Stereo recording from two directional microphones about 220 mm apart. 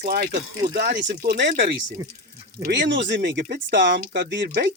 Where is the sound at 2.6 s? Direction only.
50° right (ahead or behind).